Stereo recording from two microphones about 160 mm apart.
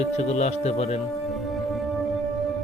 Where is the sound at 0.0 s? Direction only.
45° left (ahead or behind).